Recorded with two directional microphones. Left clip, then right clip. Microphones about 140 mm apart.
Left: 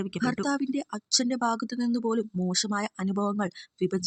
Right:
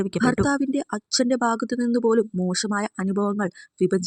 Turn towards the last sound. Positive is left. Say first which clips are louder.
# right 7 dB
turn(degrees=-25)  # may be behind; listen again after turning